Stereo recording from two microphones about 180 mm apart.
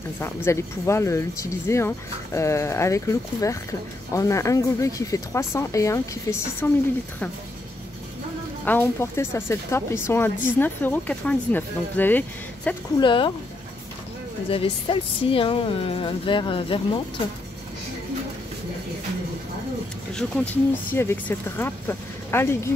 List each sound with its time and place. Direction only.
0.2 s speech: 15° left (ahead or behind)
8.6 s speech: 10° left (ahead or behind)
13.0 s a woman's voice: 25° left (ahead or behind)
14.5 s a woman's voice: 30° left (ahead or behind)
20.2 s speech: 10° left (ahead or behind)